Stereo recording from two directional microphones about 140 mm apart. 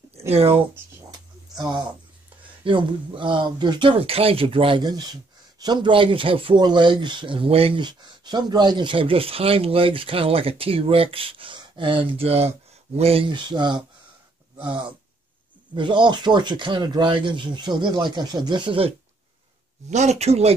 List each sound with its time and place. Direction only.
0.3 s speech: 45° right (ahead or behind)
1.1 s a sound: 30° right (ahead or behind)
2.6 s speech: 35° right (ahead or behind)
19.9 s speech: 55° right (ahead or behind)